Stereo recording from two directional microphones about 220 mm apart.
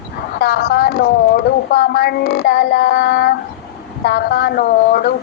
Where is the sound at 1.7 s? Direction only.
45° left (ahead or behind).